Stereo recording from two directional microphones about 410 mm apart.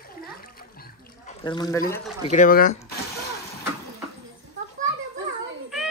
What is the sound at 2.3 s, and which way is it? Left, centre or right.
Speech, centre.